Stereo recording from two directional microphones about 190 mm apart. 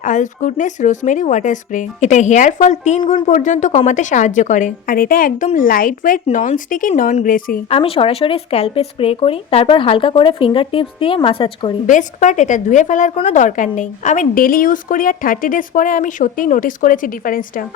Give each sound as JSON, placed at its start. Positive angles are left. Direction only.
{"t": 0.0, "sound": "a woman's voice", "side_deg": 40}
{"t": 7.7, "sound": "speech", "side_deg": 30}
{"t": 11.9, "sound": "a woman's voice", "side_deg": 40}